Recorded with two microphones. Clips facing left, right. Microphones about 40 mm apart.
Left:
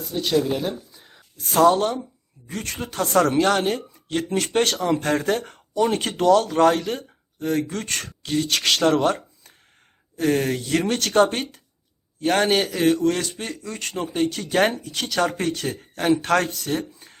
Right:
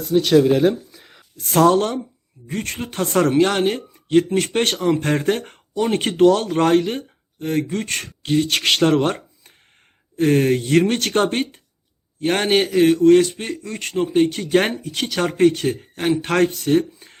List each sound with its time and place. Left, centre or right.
0.3 s speech: right
0.9 s a sound: right
2.5 s speech: right
8.2 s speech: right